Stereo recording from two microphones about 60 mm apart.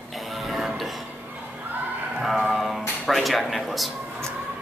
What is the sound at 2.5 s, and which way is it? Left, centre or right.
Speech, centre.